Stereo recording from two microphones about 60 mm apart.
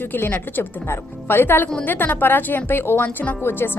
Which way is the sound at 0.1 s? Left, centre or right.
Left.